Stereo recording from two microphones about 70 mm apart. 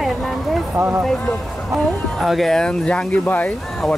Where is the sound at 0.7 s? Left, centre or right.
Right.